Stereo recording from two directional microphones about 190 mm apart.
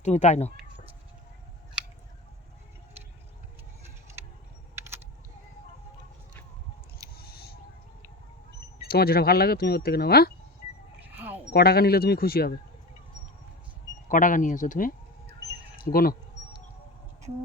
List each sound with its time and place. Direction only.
0.0 s speech: 35° left (ahead or behind)
7.2 s rodents: 55° left (ahead or behind)
8.9 s speech: 55° left (ahead or behind)
11.0 s a sound: 10° right (ahead or behind)
11.5 s speech: 55° left (ahead or behind)
14.1 s speech: 45° left (ahead or behind)
15.7 s a sound: 50° left (ahead or behind)